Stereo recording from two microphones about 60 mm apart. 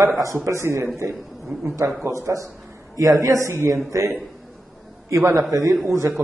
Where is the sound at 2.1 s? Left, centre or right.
Right.